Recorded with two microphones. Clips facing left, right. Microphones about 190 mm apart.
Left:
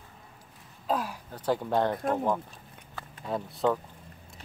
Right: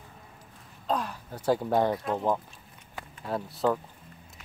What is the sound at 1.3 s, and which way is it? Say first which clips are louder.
Speech: right 2 dB; 10° right (ahead or behind).